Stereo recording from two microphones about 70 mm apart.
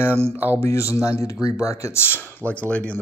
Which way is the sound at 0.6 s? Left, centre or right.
Left.